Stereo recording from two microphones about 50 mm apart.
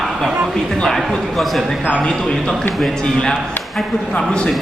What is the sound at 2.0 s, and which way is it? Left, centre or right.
Speech, centre.